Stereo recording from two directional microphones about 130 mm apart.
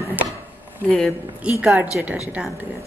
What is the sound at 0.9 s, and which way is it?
Speech, 5° left (ahead or behind).